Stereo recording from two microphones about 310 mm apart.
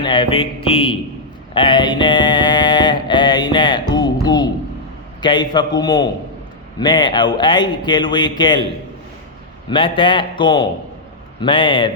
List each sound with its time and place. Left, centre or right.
0.0 s speech: centre
1.5 s mantra: centre
5.2 s speech: centre
9.6 s speech: centre